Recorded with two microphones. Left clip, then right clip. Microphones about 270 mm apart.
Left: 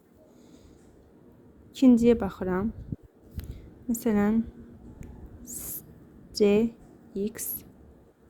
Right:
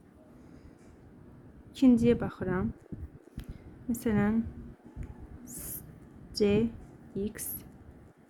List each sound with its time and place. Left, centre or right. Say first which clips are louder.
1.7 s a woman's voice: left 4 dB; centre
3.9 s a woman's voice: left 4 dB; centre
5.5 s a sound: left 5 dB; centre
6.3 s a woman's voice: left 5 dB; centre